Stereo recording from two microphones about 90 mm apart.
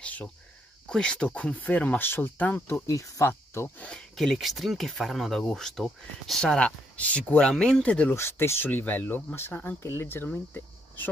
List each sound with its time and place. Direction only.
0.0 s cricket: 15° left (ahead or behind)
0.8 s speech: 10° left (ahead or behind)
2.9 s speech: 35° left (ahead or behind)
3.9 s speech: centre (ahead or behind)
8.1 s speech: 30° left (ahead or behind)